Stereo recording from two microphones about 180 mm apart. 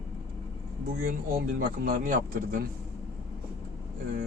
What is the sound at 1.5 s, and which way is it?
Speech, 55° right (ahead or behind).